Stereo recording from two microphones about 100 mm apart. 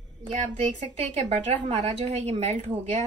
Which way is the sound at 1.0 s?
90° right.